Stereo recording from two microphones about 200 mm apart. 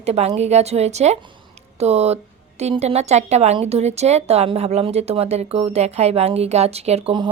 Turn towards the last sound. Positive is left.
turn(degrees=-25)  # may be behind; listen again after turning